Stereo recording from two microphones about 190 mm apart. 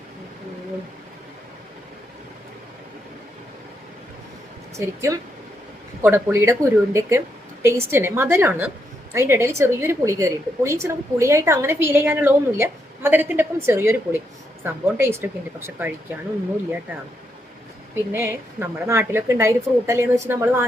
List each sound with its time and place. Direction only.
4.9 s a woman's voice: 15° right (ahead or behind)
18.1 s a woman's voice: 10° right (ahead or behind)